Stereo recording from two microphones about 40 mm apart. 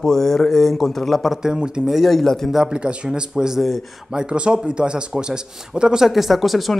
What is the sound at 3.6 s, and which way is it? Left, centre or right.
Speech, centre.